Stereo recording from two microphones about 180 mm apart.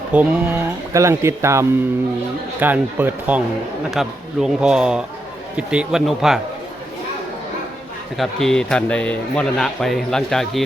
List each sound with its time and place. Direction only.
0.1 s a man's voice: 10° right (ahead or behind)
8.1 s a man's voice: centre (ahead or behind)